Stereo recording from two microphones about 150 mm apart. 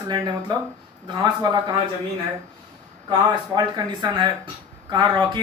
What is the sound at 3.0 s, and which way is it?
Speech, 30° right (ahead or behind).